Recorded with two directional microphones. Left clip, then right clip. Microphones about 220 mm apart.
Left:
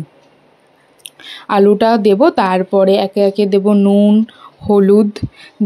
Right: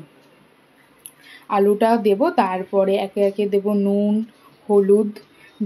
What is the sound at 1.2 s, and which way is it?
Speech, 40° left (ahead or behind).